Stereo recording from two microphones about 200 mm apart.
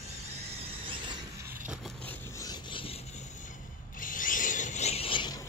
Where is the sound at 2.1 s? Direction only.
15° left (ahead or behind).